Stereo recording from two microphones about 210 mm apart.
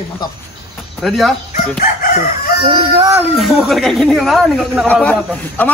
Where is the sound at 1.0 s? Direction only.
Centre (ahead or behind).